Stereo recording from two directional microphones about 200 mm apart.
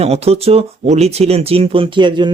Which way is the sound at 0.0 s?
30° right (ahead or behind).